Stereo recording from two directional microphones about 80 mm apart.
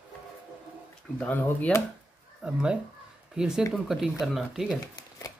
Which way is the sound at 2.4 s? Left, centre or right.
Centre.